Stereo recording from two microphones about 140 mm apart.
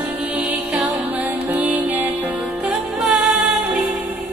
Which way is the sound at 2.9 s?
Centre (ahead or behind).